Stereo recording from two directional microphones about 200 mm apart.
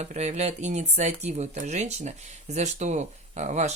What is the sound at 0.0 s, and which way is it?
Speech, 35° right (ahead or behind).